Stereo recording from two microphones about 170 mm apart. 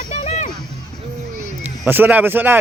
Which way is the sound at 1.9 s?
10° right (ahead or behind).